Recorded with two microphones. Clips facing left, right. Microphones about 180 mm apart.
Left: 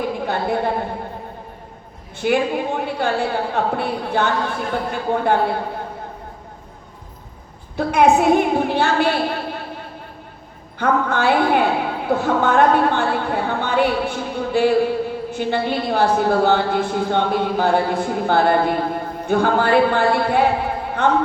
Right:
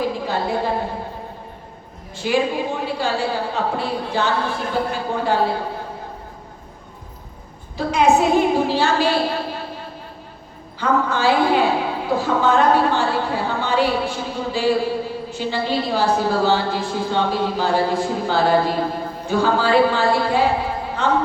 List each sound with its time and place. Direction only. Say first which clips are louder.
0.0 s a sound: even; 55° left (ahead or behind)
2.1 s a woman's voice: left 1 dB; 55° left (ahead or behind)
7.8 s a woman's voice: left 1 dB; 55° left (ahead or behind)